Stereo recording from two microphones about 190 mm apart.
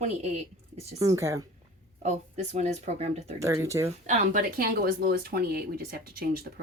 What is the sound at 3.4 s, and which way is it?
Speech, 15° right (ahead or behind).